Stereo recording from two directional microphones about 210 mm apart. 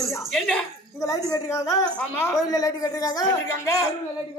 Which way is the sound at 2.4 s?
15° left (ahead or behind).